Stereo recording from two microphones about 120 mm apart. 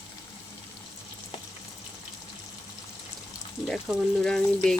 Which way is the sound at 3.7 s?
5° left (ahead or behind).